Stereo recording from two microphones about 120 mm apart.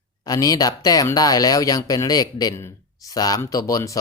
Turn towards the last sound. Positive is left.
turn(degrees=30)  # may be behind; listen again after turning